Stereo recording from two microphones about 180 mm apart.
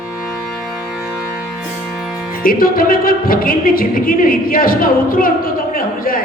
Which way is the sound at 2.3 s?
55° left (ahead or behind).